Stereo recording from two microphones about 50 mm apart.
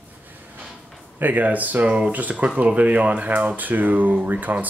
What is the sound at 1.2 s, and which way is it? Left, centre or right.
Speech, right.